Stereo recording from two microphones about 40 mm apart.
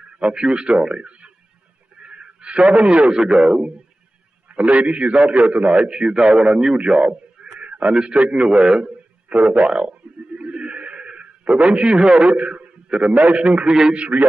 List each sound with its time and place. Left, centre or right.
0.2 s a man's voice: right
2.0 s a sound: right
2.7 s a man's voice: right
4.5 s a man's voice: right
7.6 s a sound: right
7.9 s a man's voice: right
9.3 s a man's voice: right
9.8 s a sound: right
12.3 s a man's voice: right